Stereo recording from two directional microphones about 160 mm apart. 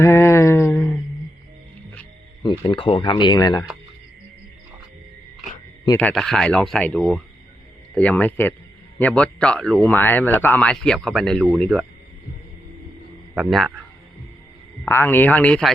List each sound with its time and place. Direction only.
0.0 s a sound: 15° left (ahead or behind)
2.4 s speech: 30° left (ahead or behind)
6.0 s a man's voice: 5° left (ahead or behind)
13.3 s speech: centre (ahead or behind)
14.8 s a man's voice: 15° left (ahead or behind)